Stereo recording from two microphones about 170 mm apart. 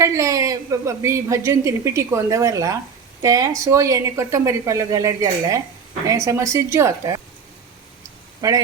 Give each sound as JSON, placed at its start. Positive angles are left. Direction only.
{"t": 0.0, "sound": "a woman's voice", "side_deg": -20}
{"t": 8.4, "sound": "speech", "side_deg": -20}